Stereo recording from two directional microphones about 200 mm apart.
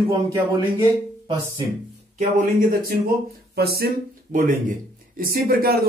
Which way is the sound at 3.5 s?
50° right (ahead or behind).